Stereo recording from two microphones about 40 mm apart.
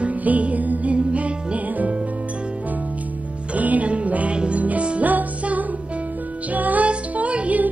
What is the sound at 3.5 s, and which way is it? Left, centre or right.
Music, right.